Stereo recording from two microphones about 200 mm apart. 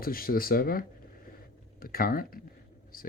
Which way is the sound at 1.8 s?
45° left (ahead or behind).